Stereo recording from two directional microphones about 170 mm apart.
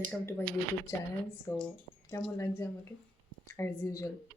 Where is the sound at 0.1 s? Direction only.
10° left (ahead or behind).